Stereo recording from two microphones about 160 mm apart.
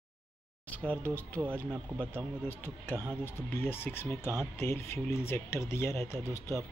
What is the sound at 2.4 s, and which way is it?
Speech, 10° left (ahead or behind).